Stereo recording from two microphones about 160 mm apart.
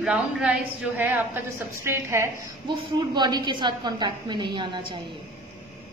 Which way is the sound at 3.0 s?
25° right (ahead or behind).